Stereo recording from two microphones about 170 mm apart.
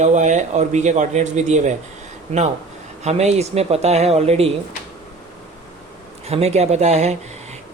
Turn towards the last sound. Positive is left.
turn(degrees=-40)  # may be behind; listen again after turning